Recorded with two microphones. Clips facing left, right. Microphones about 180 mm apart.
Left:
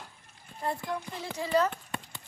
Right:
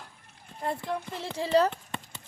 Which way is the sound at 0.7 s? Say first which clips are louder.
Right 3 dB; 25° right (ahead or behind).